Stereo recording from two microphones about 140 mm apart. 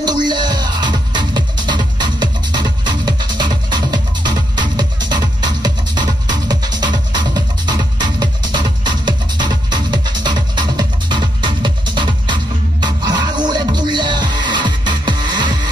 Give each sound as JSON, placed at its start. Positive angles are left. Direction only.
{"t": 0.0, "sound": "music", "side_deg": -30}